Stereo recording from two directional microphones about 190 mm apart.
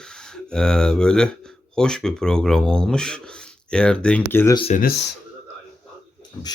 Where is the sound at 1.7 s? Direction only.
5° left (ahead or behind).